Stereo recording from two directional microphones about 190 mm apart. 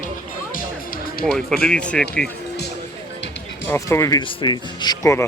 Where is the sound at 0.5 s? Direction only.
50° left (ahead or behind).